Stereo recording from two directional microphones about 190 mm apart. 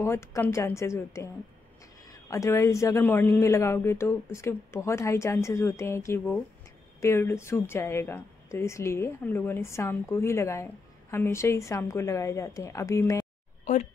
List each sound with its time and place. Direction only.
0.0 s speech: 15° left (ahead or behind)
13.7 s speech: 40° left (ahead or behind)